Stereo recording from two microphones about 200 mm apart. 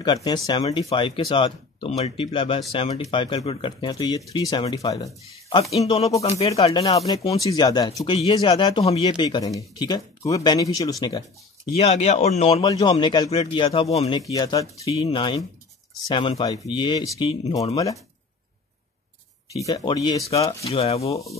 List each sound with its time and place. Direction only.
0.0 s speech: 20° left (ahead or behind)
5.6 s speech: 30° left (ahead or behind)
11.7 s speech: 35° left (ahead or behind)
12.7 s speech: 20° left (ahead or behind)
14.3 s speech: 20° left (ahead or behind)
19.5 s speech: 20° left (ahead or behind)
20.4 s speech: 30° left (ahead or behind)